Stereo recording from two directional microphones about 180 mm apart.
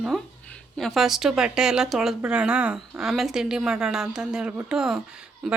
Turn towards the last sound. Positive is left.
turn(degrees=0)  # may be behind; listen again after turning